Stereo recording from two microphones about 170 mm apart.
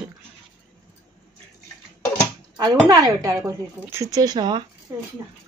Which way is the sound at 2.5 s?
25° right (ahead or behind).